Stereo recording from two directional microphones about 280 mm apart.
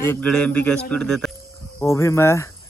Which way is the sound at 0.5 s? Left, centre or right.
Right.